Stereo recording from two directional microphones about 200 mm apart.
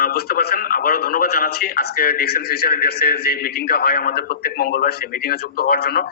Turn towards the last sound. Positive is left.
turn(degrees=50)  # may be behind; listen again after turning